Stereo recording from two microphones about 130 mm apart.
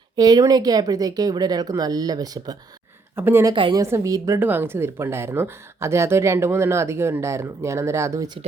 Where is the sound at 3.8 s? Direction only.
20° right (ahead or behind).